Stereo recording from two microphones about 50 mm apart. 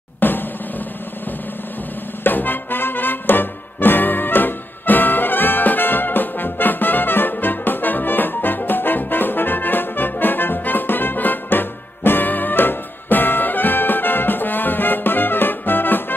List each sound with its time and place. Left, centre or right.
0.2 s drum: left
2.2 s music: left